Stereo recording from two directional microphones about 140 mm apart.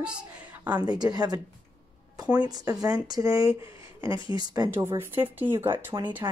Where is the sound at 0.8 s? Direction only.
30° right (ahead or behind).